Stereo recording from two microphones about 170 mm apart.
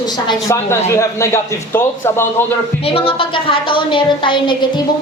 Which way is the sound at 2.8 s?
35° left (ahead or behind).